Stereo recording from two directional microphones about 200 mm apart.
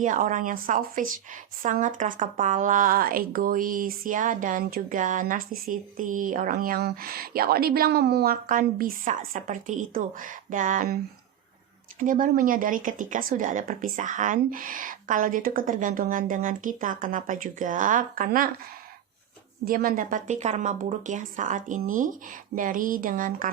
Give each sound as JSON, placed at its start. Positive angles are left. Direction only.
{"t": 0.0, "sound": "speech", "side_deg": -40}
{"t": 11.9, "sound": "speech", "side_deg": -45}
{"t": 19.6, "sound": "speech", "side_deg": -45}